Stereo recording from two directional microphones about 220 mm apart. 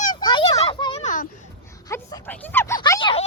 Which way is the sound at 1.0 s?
35° left (ahead or behind).